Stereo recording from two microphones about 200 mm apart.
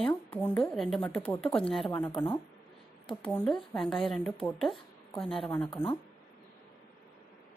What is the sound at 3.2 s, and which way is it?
Speech, 5° left (ahead or behind).